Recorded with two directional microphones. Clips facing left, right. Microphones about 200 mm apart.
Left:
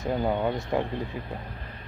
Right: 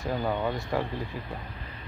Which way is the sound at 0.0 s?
20° left (ahead or behind).